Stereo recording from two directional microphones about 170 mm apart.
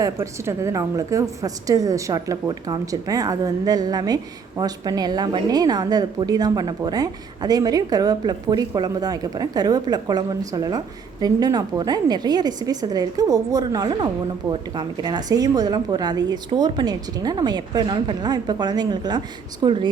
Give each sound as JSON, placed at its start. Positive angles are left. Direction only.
{"t": 0.0, "sound": "a woman's voice", "side_deg": -15}